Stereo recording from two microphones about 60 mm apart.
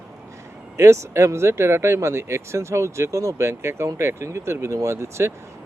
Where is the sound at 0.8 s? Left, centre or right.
Right.